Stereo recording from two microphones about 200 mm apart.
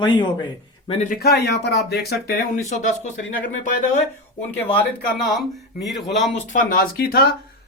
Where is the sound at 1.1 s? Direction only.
50° left (ahead or behind).